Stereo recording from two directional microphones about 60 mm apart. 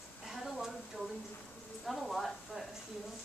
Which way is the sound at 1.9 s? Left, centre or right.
Centre.